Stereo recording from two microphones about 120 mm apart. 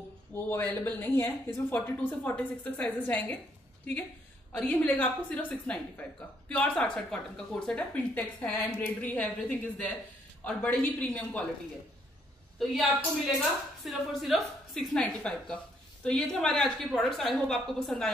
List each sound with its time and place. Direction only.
0.3 s speech: 15° left (ahead or behind)
4.6 s speech: 10° left (ahead or behind)
10.4 s speech: 10° left (ahead or behind)
12.5 s a woman's voice: centre (ahead or behind)